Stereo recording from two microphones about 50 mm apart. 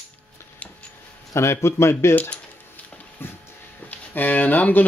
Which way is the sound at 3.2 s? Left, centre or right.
Left.